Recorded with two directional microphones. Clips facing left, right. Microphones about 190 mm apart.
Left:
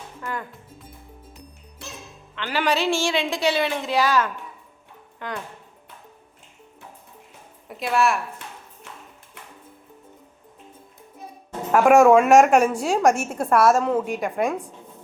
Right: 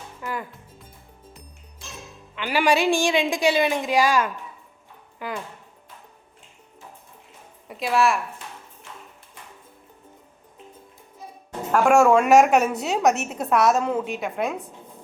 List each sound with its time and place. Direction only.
0.2 s speech: 5° right (ahead or behind)
1.8 s music: 65° left (ahead or behind)
2.3 s a woman's voice: 10° right (ahead or behind)
7.7 s speech: centre (ahead or behind)
11.7 s speech: centre (ahead or behind)
12.7 s a woman's voice: 10° left (ahead or behind)